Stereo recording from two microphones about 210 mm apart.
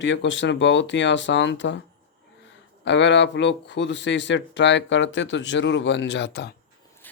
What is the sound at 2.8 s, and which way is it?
Speech, 60° left (ahead or behind).